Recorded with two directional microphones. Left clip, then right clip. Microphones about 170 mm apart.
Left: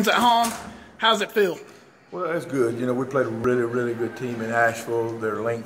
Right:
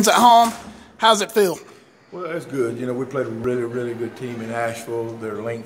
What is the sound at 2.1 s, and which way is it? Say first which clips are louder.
A man's voice: left 1 dB; 5° left (ahead or behind).